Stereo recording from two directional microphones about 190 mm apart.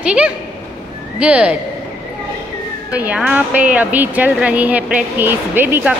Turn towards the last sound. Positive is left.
turn(degrees=-10)  # may be behind; listen again after turning